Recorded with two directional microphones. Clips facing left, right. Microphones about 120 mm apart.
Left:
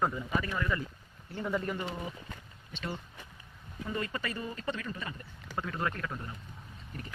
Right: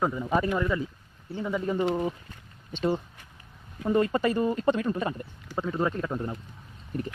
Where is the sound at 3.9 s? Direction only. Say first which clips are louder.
Right 12 dB; 45° right (ahead or behind).